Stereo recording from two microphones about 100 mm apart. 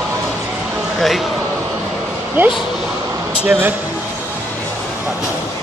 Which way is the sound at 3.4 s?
15° right (ahead or behind).